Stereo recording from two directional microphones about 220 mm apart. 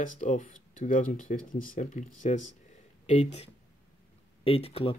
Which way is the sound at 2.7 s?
30° left (ahead or behind).